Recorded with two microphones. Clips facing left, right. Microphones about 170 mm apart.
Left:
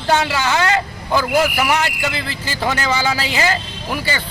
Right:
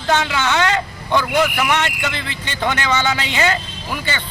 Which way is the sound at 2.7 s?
35° left (ahead or behind).